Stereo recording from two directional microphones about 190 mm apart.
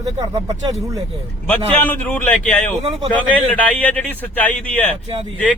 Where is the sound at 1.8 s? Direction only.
10° left (ahead or behind).